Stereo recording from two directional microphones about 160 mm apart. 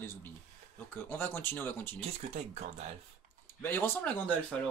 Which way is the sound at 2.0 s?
40° right (ahead or behind).